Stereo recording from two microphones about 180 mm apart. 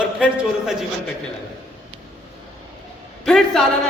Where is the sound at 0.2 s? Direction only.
5° right (ahead or behind).